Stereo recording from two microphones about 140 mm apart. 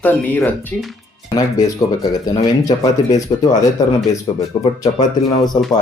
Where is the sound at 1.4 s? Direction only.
25° left (ahead or behind).